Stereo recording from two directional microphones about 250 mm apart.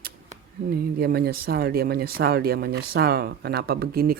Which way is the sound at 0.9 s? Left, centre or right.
Right.